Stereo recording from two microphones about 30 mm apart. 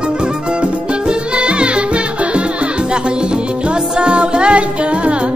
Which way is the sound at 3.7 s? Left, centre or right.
Right.